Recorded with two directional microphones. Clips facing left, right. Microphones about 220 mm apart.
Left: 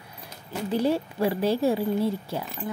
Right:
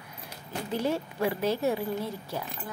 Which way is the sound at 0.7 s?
35° left (ahead or behind).